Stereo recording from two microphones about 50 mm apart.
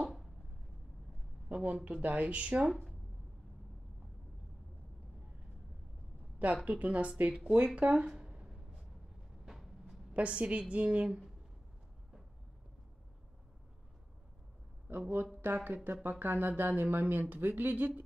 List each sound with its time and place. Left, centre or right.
1.5 s a woman's voice: right
6.4 s a woman's voice: right
8.2 s a sound: centre
9.5 s vehicle: centre
10.1 s a woman's voice: right
14.9 s speech: right